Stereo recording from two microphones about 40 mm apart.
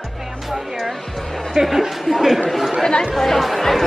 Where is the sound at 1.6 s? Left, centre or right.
Centre.